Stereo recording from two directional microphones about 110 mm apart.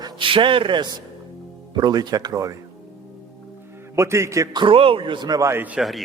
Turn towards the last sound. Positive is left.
turn(degrees=0)  # may be behind; listen again after turning